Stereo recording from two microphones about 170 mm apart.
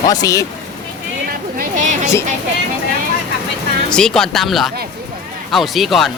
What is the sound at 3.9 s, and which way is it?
A man's voice, 5° left (ahead or behind).